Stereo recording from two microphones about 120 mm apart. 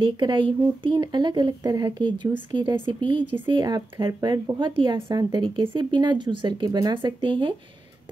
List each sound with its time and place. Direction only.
0.0 s speech: 40° right (ahead or behind)
4.9 s a woman's voice: 25° right (ahead or behind)
5.3 s speech: 45° right (ahead or behind)